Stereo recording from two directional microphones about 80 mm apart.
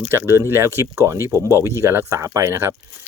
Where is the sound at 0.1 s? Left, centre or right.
Right.